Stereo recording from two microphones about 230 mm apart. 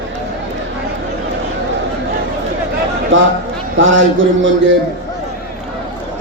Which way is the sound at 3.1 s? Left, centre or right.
Right.